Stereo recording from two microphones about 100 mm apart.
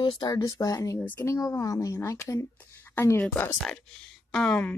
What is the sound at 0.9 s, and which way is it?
Speech, 20° left (ahead or behind).